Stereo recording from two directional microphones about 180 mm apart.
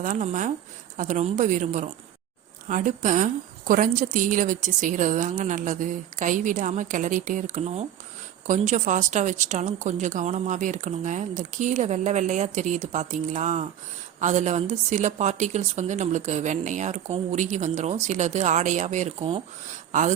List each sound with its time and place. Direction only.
0.0 s a woman's voice: 45° right (ahead or behind)